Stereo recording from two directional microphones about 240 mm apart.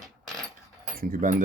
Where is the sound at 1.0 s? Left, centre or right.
Right.